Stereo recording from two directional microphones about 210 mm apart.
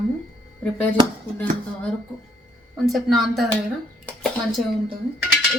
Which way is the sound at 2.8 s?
Centre (ahead or behind).